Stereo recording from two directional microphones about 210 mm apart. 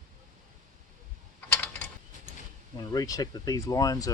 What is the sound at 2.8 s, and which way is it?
Speech, 15° left (ahead or behind).